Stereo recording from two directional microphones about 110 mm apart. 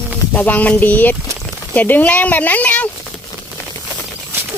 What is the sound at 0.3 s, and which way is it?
Speech, 15° left (ahead or behind).